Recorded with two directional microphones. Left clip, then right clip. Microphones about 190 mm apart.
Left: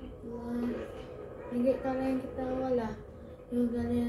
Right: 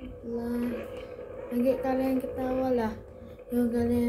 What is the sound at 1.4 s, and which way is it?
A child's voice, 40° right (ahead or behind).